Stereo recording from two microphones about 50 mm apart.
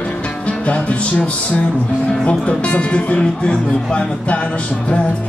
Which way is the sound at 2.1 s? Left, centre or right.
Centre.